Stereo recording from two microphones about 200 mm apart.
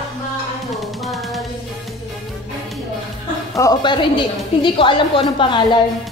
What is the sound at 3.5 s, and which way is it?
A woman's voice, 20° left (ahead or behind).